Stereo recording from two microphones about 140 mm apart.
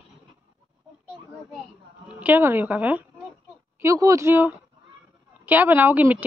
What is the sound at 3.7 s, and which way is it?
Speech, 20° right (ahead or behind).